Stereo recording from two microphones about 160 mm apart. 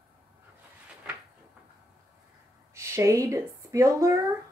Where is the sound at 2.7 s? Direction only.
15° right (ahead or behind).